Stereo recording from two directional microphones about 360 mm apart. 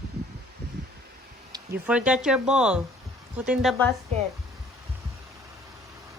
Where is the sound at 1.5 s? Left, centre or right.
Centre.